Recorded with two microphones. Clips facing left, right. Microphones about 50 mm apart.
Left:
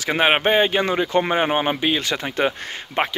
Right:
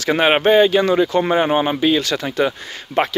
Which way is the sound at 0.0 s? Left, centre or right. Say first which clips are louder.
Right 3 dB; centre.